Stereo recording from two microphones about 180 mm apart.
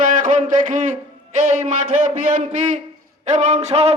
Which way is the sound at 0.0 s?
45° right (ahead or behind).